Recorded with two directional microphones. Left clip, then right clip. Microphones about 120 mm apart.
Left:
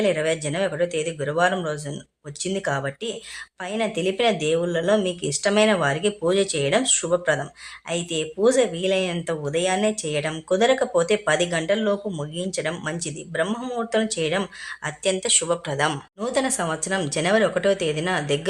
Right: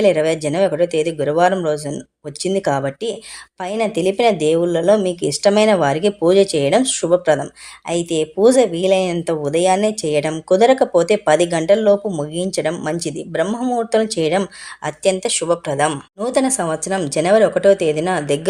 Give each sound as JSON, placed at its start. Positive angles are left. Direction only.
{"t": 0.0, "sound": "speech", "side_deg": -40}
{"t": 13.9, "sound": "speech", "side_deg": -40}